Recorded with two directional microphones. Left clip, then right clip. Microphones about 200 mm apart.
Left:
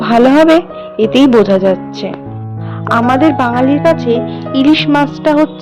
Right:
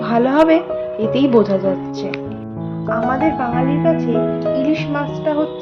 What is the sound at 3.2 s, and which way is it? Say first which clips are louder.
Music: left 7 dB; 60° left (ahead or behind).